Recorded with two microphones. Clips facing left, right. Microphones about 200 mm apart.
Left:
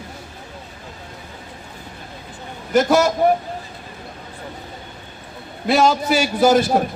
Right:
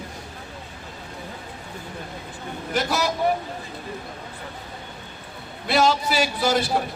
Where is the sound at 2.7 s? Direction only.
45° left (ahead or behind).